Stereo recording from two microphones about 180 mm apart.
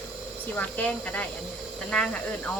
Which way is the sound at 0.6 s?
10° left (ahead or behind).